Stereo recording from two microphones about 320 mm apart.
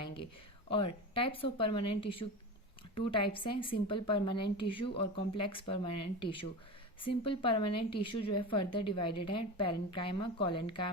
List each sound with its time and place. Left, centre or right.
1.1 s a woman's voice: centre